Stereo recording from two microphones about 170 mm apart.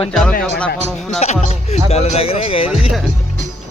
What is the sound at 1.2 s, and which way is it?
Speech, 40° left (ahead or behind).